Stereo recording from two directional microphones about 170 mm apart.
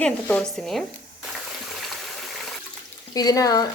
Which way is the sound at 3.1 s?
20° left (ahead or behind).